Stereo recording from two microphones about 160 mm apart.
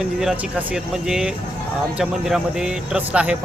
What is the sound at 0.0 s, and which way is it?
Speech, 5° right (ahead or behind).